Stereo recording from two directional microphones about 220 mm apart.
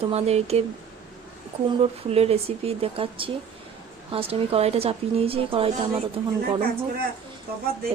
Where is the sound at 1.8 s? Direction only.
25° right (ahead or behind).